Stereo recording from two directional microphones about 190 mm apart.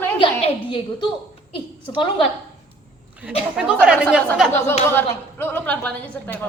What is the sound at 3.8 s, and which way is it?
Speech, 5° right (ahead or behind).